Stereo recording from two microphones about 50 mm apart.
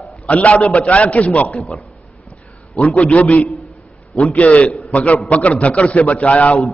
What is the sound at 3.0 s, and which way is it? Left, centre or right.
A man's voice, left.